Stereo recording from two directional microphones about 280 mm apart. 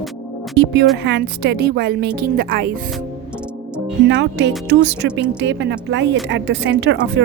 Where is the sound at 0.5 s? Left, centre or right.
Right.